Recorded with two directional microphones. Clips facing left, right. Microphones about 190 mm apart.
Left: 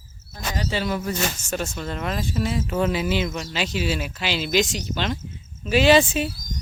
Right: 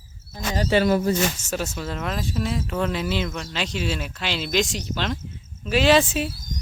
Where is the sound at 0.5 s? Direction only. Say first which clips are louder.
Right 7 dB; 55° right (ahead or behind).